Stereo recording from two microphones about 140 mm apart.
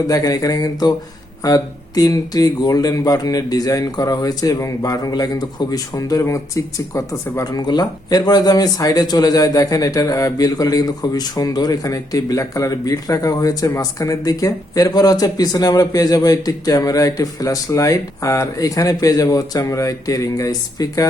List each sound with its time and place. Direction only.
0.1 s speech: 25° left (ahead or behind)